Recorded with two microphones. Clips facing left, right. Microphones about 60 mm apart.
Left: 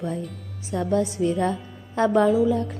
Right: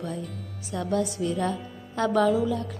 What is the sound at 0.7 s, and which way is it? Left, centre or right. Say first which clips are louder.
A woman's voice: left 4 dB; left.